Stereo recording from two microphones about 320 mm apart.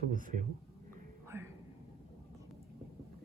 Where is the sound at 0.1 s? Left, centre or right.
Right.